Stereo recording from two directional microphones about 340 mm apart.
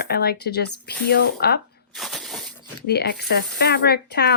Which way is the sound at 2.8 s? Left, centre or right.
Left.